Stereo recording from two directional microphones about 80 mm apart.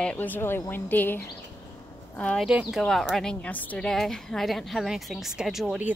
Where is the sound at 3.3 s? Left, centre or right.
Centre.